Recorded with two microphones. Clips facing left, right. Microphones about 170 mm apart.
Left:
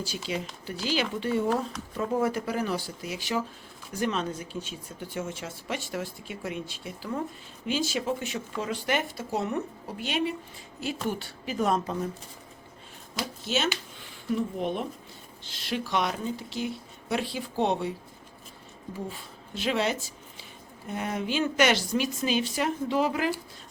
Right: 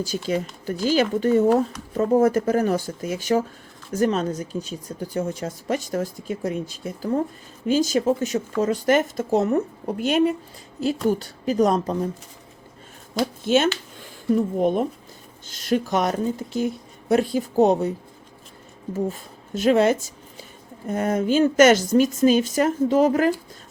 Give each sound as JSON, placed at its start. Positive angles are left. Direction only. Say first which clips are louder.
{"t": 0.0, "sound": "speech", "louder": "right 8 dB", "side_deg": -45}
{"t": 13.4, "sound": "speech", "louder": "right 9 dB", "side_deg": -50}
{"t": 18.9, "sound": "speech", "louder": "right 11 dB", "side_deg": -45}